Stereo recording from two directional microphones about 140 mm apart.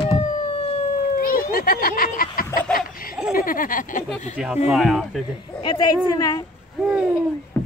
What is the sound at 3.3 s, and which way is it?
Speech, 80° left.